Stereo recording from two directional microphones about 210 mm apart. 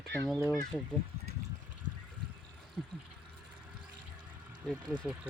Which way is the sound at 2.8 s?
Centre (ahead or behind).